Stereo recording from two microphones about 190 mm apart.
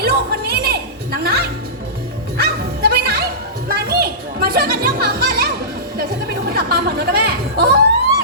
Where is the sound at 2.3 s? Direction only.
55° right (ahead or behind).